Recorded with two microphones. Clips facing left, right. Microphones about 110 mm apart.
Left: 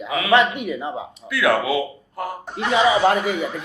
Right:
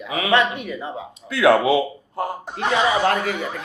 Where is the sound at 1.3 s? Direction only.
25° right (ahead or behind).